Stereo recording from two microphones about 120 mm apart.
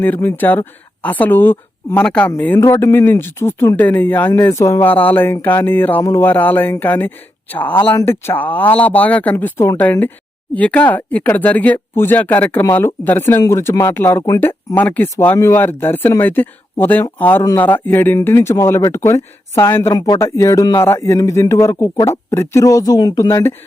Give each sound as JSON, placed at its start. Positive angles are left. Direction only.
{"t": 0.0, "sound": "speech", "side_deg": 15}
{"t": 2.6, "sound": "speech", "side_deg": 25}
{"t": 19.9, "sound": "speech", "side_deg": 30}